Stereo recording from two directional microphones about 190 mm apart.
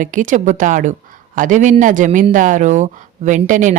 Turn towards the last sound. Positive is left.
turn(degrees=-40)  # may be behind; listen again after turning